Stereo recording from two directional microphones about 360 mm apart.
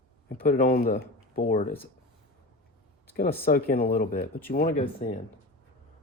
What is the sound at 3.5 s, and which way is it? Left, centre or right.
Speech, left.